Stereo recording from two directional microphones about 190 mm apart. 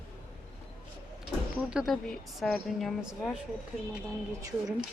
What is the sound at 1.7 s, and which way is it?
Speech, centre (ahead or behind).